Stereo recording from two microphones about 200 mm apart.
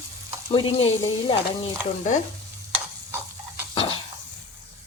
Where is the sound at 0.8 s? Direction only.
85° left.